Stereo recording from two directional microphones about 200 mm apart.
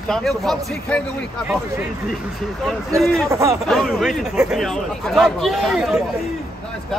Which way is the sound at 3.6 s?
Centre (ahead or behind).